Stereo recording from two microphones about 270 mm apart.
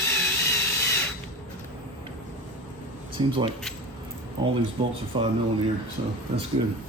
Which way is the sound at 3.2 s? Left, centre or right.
Centre.